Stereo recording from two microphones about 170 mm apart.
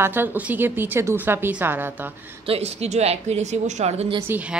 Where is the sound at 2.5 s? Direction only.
40° right (ahead or behind).